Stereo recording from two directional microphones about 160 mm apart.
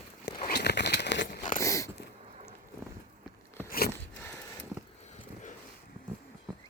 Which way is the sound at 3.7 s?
70° left (ahead or behind).